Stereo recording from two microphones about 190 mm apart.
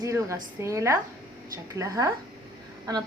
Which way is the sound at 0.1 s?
15° right (ahead or behind).